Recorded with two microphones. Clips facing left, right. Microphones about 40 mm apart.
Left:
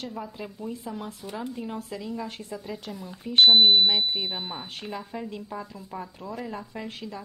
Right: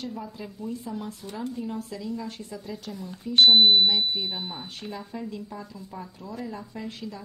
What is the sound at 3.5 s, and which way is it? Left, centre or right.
Speech, centre.